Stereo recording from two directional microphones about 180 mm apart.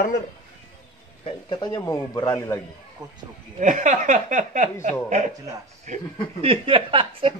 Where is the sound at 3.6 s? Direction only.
45° right (ahead or behind).